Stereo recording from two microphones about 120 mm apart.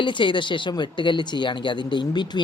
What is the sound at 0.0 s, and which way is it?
Speech, 40° left (ahead or behind).